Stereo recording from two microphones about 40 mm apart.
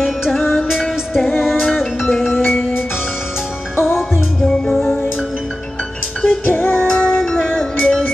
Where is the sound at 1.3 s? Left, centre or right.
Centre.